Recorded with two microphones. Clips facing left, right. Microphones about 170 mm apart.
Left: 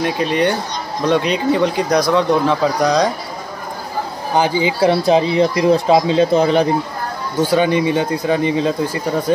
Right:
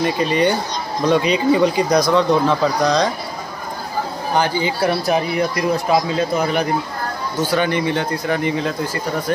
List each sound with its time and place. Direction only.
0.0 s speech: centre (ahead or behind)
4.4 s speech: 15° left (ahead or behind)
7.5 s speech: 15° left (ahead or behind)